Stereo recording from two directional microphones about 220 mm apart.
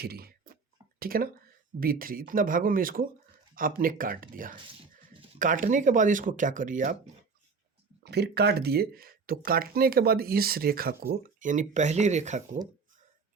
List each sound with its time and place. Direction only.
0.0 s a sound: 45° right (ahead or behind)
0.9 s speech: 40° right (ahead or behind)
8.0 s speech: 50° right (ahead or behind); by 12.4 s 30° right (ahead or behind)